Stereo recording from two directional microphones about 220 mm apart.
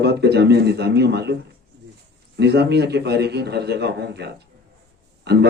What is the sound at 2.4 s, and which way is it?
Speech, 50° right (ahead or behind).